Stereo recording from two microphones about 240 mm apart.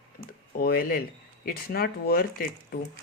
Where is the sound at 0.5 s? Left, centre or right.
Left.